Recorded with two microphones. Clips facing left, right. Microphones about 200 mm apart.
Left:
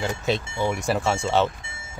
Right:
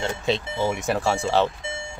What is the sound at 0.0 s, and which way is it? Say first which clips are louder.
Speech: even; centre (ahead or behind).